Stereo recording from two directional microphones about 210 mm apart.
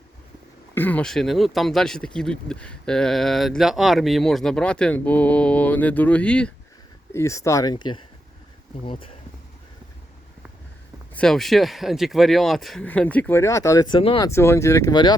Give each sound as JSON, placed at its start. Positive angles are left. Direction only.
{"t": 0.7, "sound": "speech", "side_deg": 10}
{"t": 11.1, "sound": "speech", "side_deg": 5}
{"t": 14.3, "sound": "speech", "side_deg": 10}